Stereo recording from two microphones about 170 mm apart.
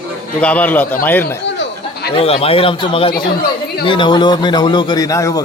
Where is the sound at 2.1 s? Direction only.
35° left (ahead or behind).